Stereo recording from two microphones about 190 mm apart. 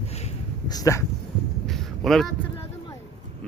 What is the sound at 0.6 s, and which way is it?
Speech, 20° left (ahead or behind).